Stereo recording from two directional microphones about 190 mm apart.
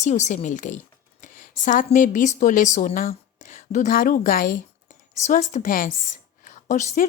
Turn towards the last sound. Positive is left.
turn(degrees=40)  # may be behind; listen again after turning